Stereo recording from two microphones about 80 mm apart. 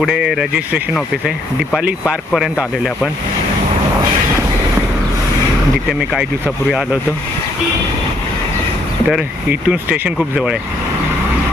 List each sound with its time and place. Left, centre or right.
0.0 s speech: centre
1.8 s speech: centre
6.7 s speech: centre
9.5 s speech: centre